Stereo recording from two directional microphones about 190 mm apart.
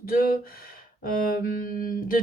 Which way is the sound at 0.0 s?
50° left (ahead or behind).